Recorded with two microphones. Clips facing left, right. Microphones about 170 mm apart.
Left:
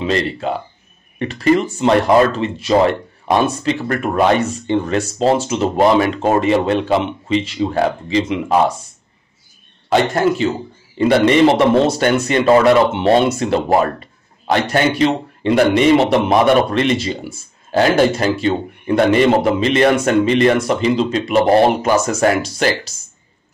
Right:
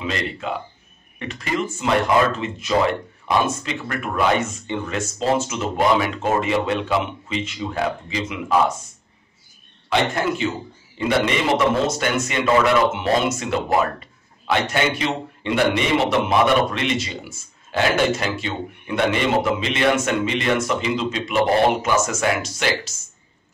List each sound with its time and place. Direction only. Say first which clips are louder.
0.0 s a man's voice: left 8 dB; 35° left (ahead or behind)
9.8 s a man's voice: left 6 dB; 35° left (ahead or behind)